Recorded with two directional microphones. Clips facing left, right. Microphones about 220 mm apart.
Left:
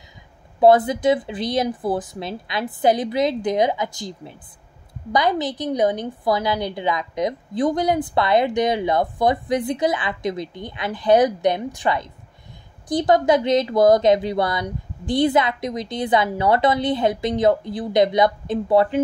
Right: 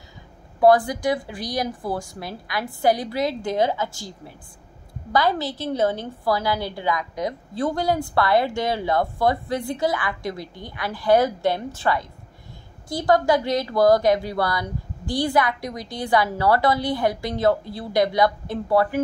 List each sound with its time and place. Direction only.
0.6 s a woman's voice: 20° left (ahead or behind)